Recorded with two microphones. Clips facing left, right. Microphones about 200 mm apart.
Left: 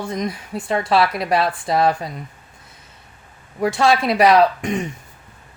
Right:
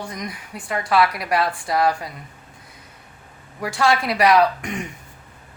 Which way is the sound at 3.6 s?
25° left (ahead or behind).